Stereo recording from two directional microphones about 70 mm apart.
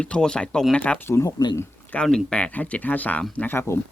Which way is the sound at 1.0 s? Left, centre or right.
Left.